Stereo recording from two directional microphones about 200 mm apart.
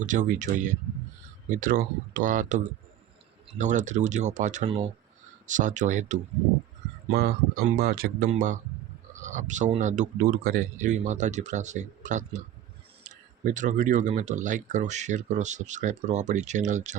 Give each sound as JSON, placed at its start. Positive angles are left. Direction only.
{"t": 0.0, "sound": "speech", "side_deg": -40}
{"t": 3.6, "sound": "speech", "side_deg": -40}
{"t": 7.1, "sound": "speech", "side_deg": -50}